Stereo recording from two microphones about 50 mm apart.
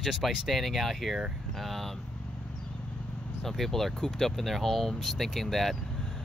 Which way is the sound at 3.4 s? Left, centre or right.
Centre.